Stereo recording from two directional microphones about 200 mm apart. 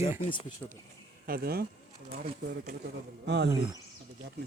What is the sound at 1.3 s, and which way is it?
Speech, 50° right (ahead or behind).